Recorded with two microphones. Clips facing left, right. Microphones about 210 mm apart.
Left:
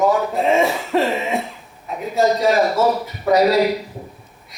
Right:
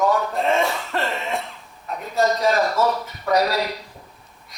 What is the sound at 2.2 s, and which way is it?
A man's voice, 15° left (ahead or behind).